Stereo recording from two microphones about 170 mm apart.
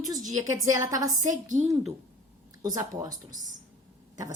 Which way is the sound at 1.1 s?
45° right (ahead or behind).